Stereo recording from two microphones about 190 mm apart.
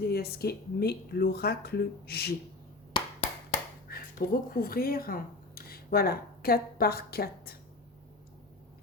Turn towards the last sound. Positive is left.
turn(degrees=55)  # may be behind; listen again after turning